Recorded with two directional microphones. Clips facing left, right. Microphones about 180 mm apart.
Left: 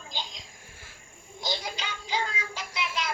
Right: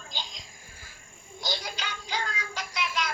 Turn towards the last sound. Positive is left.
turn(degrees=25)  # may be behind; listen again after turning